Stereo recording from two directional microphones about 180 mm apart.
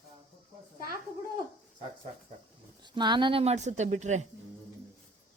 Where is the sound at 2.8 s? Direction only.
25° right (ahead or behind); by 4.2 s 40° right (ahead or behind).